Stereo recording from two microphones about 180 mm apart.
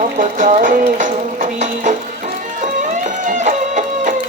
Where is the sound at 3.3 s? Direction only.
40° right (ahead or behind).